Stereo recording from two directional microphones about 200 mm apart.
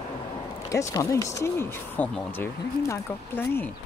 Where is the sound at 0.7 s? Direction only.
15° left (ahead or behind).